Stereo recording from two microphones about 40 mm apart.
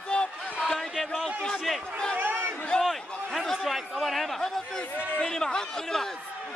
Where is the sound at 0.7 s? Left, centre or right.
Centre.